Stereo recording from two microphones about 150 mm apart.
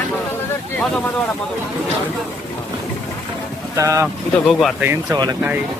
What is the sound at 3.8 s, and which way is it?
Speech, 20° right (ahead or behind).